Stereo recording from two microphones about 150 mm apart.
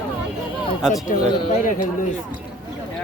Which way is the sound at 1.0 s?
55° left (ahead or behind).